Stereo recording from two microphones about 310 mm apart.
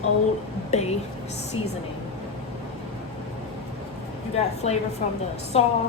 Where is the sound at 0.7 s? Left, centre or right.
Left.